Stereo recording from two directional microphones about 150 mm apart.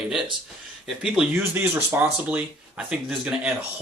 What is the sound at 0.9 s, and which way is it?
Speech, 5° right (ahead or behind).